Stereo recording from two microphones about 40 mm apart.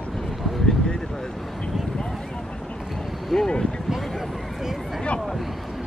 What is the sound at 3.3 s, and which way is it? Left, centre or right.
Vehicle, centre.